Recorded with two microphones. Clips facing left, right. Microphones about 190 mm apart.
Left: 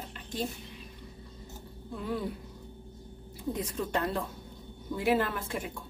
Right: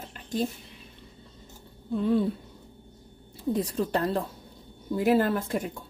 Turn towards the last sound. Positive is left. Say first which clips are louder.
# right 6 dB
turn(degrees=-40)  # may be behind; listen again after turning